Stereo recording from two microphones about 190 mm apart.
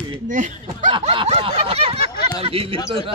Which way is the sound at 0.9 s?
30° right (ahead or behind).